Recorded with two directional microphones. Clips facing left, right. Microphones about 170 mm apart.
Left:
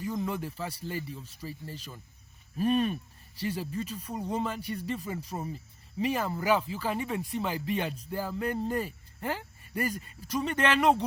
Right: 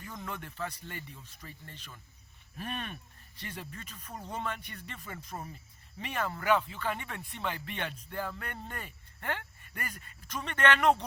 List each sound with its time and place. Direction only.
0.0 s a sound: 30° left (ahead or behind)
0.4 s a man's voice: 5° left (ahead or behind)
0.7 s speech: 30° left (ahead or behind)
5.3 s speech: 20° left (ahead or behind)
6.0 s speech: 30° left (ahead or behind)
8.1 s speech: 5° left (ahead or behind)
8.4 s speech: 30° left (ahead or behind)
10.5 s speech: 10° left (ahead or behind)